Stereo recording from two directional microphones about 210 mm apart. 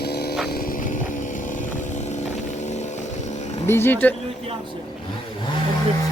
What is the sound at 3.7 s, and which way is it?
Speech, 10° left (ahead or behind).